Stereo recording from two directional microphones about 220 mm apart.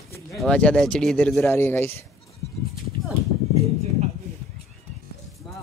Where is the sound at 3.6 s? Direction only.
30° right (ahead or behind).